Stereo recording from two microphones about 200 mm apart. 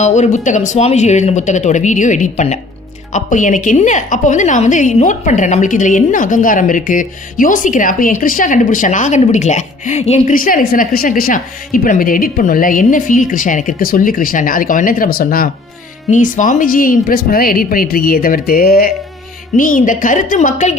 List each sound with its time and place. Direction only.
0.0 s a woman's voice: 35° left (ahead or behind)